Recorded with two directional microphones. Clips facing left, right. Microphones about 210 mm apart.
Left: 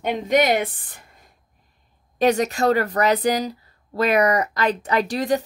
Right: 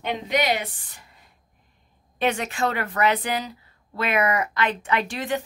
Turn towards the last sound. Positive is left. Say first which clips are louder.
# left 5 dB
turn(degrees=40)  # may be behind; listen again after turning